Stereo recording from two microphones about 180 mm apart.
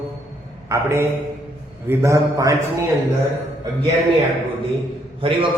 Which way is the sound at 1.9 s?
15° right (ahead or behind).